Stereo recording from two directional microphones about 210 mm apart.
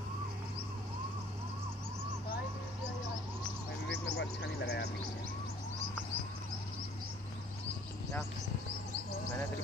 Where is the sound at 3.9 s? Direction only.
55° left (ahead or behind).